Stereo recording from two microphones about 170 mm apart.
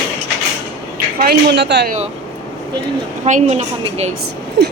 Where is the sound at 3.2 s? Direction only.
40° right (ahead or behind).